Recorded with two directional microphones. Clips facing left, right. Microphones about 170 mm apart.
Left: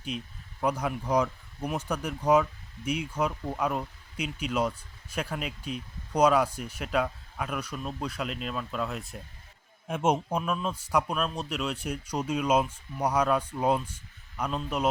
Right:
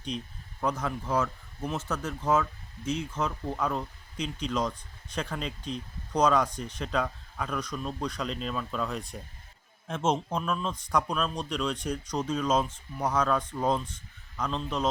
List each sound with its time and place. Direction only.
0.6 s speech: 10° left (ahead or behind)